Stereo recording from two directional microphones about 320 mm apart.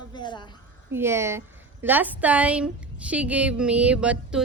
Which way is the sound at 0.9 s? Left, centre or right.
Centre.